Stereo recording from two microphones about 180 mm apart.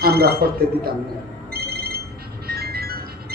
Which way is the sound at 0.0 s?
60° right (ahead or behind).